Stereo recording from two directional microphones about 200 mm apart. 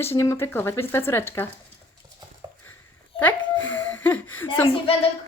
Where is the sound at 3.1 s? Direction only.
10° left (ahead or behind).